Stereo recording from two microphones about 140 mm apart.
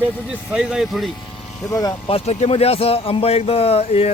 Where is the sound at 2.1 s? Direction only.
50° left (ahead or behind).